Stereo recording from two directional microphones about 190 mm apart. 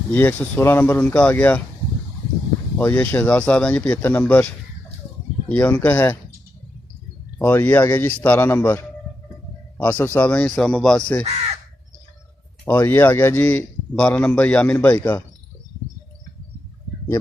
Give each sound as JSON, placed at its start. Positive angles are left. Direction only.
{"t": 0.1, "sound": "a man's voice", "side_deg": 10}
{"t": 2.7, "sound": "a man's voice", "side_deg": 10}
{"t": 5.5, "sound": "a man's voice", "side_deg": 10}
{"t": 7.3, "sound": "a man's voice", "side_deg": 10}
{"t": 12.6, "sound": "a man's voice", "side_deg": 10}